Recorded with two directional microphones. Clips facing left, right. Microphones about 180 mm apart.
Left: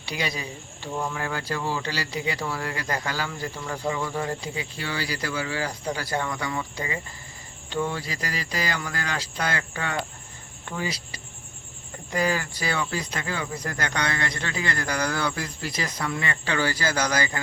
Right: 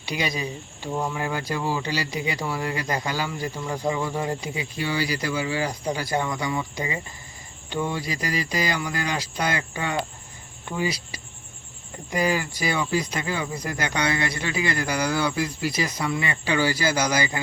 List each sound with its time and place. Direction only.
0.0 s speech: 15° right (ahead or behind)